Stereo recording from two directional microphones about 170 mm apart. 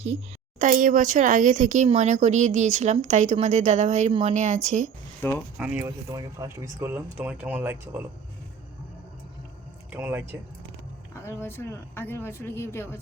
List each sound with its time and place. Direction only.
0.6 s speech: 55° right (ahead or behind)
5.2 s a woman's voice: 10° left (ahead or behind)
5.5 s speech: 5° right (ahead or behind)
5.8 s speech: 20° right (ahead or behind)
9.9 s speech: 10° right (ahead or behind)
11.1 s a woman's voice: 15° left (ahead or behind)